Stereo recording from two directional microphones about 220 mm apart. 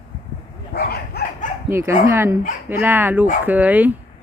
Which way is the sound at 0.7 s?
45° left (ahead or behind).